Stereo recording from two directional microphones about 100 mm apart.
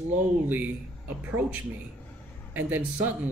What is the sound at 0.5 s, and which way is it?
A man's voice, 15° right (ahead or behind).